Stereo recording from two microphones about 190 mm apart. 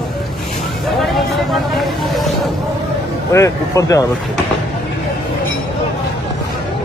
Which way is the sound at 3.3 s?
15° left (ahead or behind).